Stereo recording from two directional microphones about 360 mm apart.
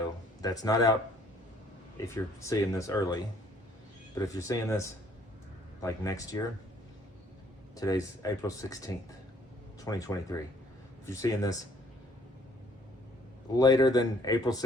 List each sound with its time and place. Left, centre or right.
0.4 s speech: centre
2.0 s speech: centre
7.8 s speech: centre
13.6 s speech: centre